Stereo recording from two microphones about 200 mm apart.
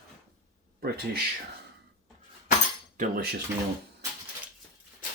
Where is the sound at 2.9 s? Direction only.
50° right (ahead or behind).